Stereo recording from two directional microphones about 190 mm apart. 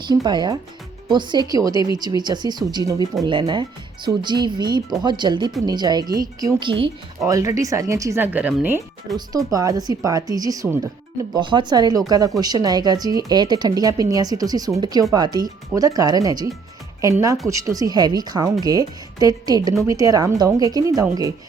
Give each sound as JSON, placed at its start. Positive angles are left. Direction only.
{"t": 0.1, "sound": "a woman's voice", "side_deg": -25}
{"t": 7.2, "sound": "speech", "side_deg": -15}
{"t": 9.1, "sound": "a woman's voice", "side_deg": -20}